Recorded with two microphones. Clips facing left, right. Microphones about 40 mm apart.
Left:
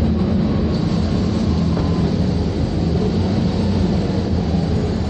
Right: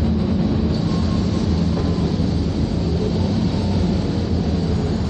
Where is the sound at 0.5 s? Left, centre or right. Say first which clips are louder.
Left 1 dB; left.